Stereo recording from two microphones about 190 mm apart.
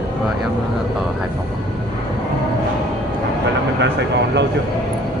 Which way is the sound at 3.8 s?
65° right (ahead or behind).